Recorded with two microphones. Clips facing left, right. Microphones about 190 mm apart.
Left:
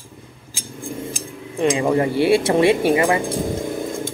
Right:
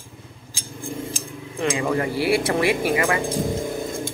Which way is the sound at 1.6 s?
25° left (ahead or behind).